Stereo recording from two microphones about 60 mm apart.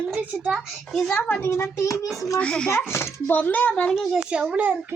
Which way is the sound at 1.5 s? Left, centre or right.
Left.